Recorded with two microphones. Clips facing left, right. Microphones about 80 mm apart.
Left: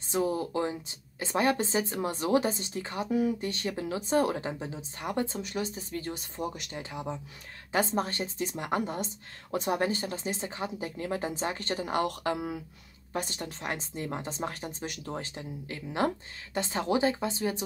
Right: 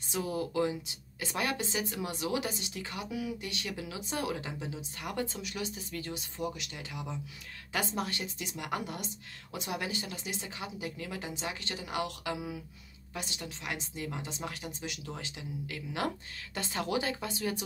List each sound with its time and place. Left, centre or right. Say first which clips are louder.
0.1 s a woman's voice: left 5 dB; left
13.1 s a woman's voice: left 6 dB; left